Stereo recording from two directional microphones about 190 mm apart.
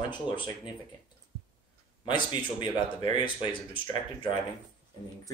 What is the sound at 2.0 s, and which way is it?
Speech, 25° left (ahead or behind).